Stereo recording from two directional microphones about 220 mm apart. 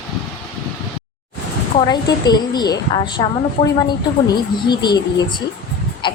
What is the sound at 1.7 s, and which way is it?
A woman's voice, 20° left (ahead or behind).